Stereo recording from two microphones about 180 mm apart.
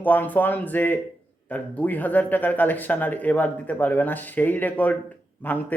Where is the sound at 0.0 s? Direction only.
10° left (ahead or behind).